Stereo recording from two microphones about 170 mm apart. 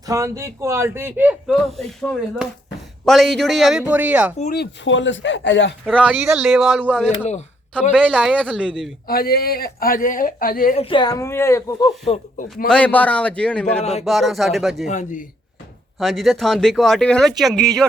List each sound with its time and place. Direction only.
0.0 s a man's voice: 20° right (ahead or behind)
1.5 s speech: centre (ahead or behind)
4.5 s speech: 80° left
5.8 s speech: 5° left (ahead or behind)
8.1 s a man's voice: 5° right (ahead or behind)
9.0 s a man's voice: 65° left (ahead or behind)
10.8 s speech: 30° left (ahead or behind)
12.6 s a man's voice: 5° left (ahead or behind)
14.8 s a man's voice: 45° left (ahead or behind)
16.0 s speech: centre (ahead or behind)